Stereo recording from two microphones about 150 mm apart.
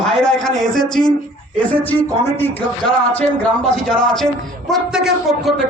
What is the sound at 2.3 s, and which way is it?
Speech, 15° left (ahead or behind).